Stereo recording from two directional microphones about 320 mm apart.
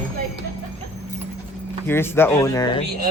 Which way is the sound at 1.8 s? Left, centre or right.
Centre.